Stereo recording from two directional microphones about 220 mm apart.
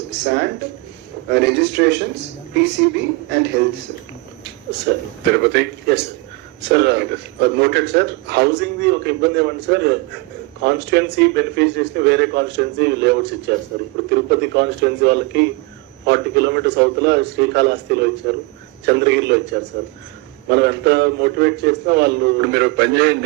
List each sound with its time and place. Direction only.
0.3 s a man's voice: 50° right (ahead or behind)
4.9 s a man's voice: 50° right (ahead or behind)